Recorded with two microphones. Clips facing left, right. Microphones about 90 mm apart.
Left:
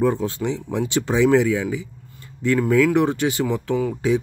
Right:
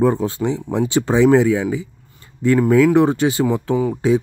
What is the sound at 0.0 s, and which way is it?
Speech, 35° right (ahead or behind).